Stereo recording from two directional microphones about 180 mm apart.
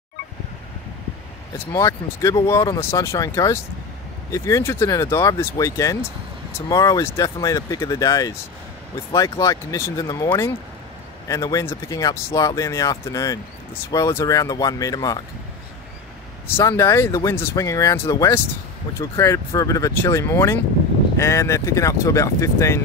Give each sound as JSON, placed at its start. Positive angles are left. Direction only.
{"t": 1.7, "sound": "speech", "side_deg": 20}
{"t": 16.4, "sound": "speech", "side_deg": 15}